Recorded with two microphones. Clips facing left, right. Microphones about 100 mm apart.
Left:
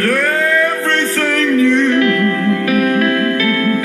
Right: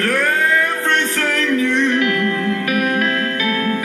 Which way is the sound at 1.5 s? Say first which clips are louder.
Left 6 dB; 25° right (ahead or behind).